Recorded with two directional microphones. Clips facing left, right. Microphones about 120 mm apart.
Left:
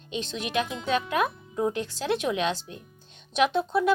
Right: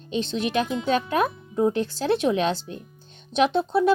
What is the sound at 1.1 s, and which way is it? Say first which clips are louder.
A child's voice: right 3 dB; 30° right (ahead or behind).